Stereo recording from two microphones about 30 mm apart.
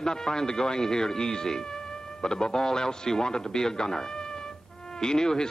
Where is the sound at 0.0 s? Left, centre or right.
Left.